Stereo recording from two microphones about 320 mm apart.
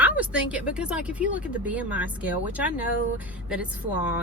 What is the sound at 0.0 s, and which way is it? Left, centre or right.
Speech, centre.